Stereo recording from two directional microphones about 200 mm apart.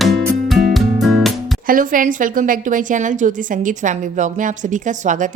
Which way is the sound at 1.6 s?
40° right (ahead or behind).